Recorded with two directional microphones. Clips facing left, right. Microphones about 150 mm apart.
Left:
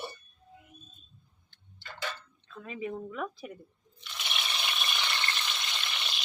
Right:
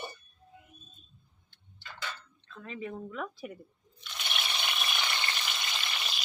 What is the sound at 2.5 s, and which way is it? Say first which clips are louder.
Speech: left 2 dB; 15° left (ahead or behind).